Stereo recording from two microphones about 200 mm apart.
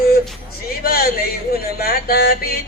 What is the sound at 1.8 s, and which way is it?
Yodeling, 50° left (ahead or behind).